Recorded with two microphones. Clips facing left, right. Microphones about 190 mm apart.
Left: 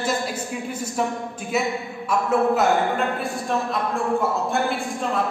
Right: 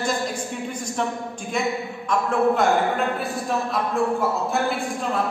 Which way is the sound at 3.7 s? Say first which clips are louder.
Even; centre (ahead or behind).